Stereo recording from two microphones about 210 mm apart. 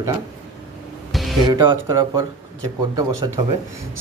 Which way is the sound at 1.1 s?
Centre (ahead or behind).